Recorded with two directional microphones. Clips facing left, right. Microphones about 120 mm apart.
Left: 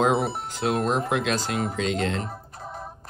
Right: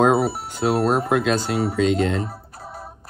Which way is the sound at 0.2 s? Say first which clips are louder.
Right 5 dB; 5° right (ahead or behind).